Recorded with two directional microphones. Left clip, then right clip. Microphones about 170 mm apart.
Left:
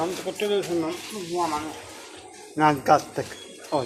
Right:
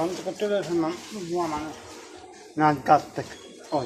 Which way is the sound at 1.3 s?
45° right (ahead or behind).